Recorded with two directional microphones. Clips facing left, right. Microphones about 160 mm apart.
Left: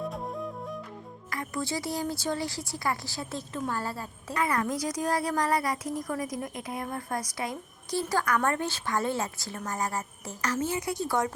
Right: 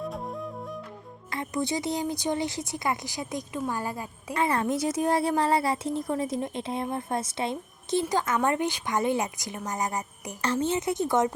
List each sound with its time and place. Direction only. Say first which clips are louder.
0.0 s music: even; centre (ahead or behind)
1.3 s a woman's voice: right 3 dB; 20° right (ahead or behind)
4.4 s speech: right 3 dB; 25° right (ahead or behind)